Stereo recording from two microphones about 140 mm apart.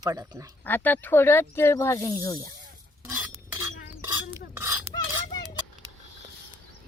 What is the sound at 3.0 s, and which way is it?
Stir, 10° right (ahead or behind).